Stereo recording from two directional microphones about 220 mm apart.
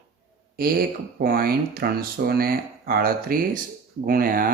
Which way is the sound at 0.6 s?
40° right (ahead or behind).